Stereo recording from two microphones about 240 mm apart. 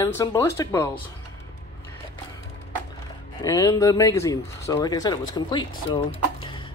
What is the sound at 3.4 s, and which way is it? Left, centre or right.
Speech, centre.